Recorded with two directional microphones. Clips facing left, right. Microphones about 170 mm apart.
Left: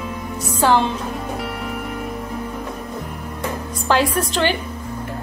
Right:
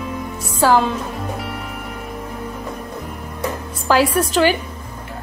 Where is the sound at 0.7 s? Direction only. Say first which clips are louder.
Right 1 dB; centre (ahead or behind).